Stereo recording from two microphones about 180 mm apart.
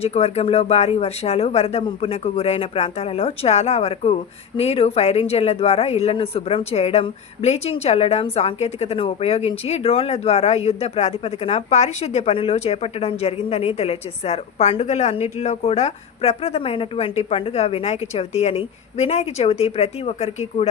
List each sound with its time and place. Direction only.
0.0 s speech: 35° left (ahead or behind)